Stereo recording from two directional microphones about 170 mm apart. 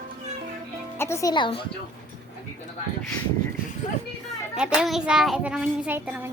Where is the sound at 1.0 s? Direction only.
15° left (ahead or behind).